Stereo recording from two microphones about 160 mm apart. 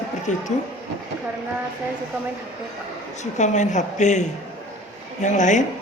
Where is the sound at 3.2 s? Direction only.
50° left (ahead or behind).